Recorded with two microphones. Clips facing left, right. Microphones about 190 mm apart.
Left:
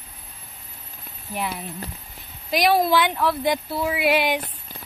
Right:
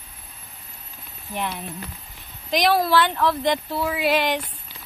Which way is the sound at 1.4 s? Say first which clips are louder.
Even; 5° left (ahead or behind).